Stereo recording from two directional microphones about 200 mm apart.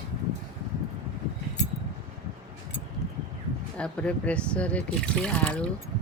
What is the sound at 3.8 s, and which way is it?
Speech, 5° left (ahead or behind).